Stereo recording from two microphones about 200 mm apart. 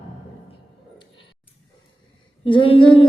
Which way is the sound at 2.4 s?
25° left (ahead or behind).